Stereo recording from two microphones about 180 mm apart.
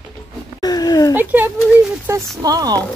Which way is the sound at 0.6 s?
20° left (ahead or behind).